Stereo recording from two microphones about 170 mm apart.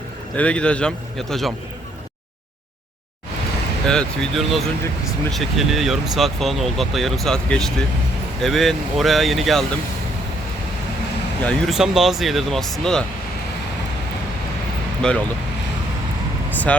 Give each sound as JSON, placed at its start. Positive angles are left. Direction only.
{"t": 0.3, "sound": "speech", "side_deg": 5}
{"t": 3.8, "sound": "speech", "side_deg": 5}
{"t": 11.4, "sound": "speech", "side_deg": 0}
{"t": 15.0, "sound": "speech", "side_deg": 5}
{"t": 16.5, "sound": "speech", "side_deg": 10}